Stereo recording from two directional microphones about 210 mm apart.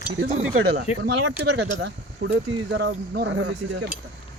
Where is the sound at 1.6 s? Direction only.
55° right (ahead or behind).